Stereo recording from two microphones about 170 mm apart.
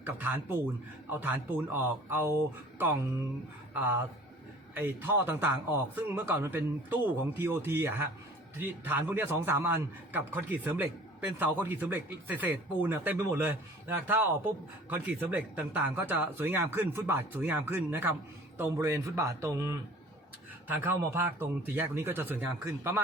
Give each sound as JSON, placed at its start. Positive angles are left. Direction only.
{"t": 0.0, "sound": "a man's voice", "side_deg": -10}
{"t": 2.7, "sound": "a sound", "side_deg": -10}
{"t": 4.7, "sound": "a man's voice", "side_deg": -10}